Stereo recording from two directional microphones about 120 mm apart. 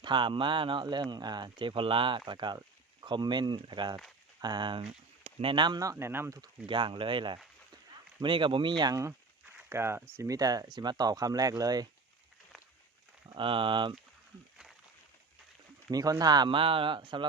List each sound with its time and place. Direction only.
0.0 s speech: 40° right (ahead or behind)
4.8 s speech: 55° right (ahead or behind); by 6.4 s 20° right (ahead or behind)
6.7 s speech: 45° right (ahead or behind)
13.2 s speech: 45° right (ahead or behind)
15.9 s speech: 30° right (ahead or behind)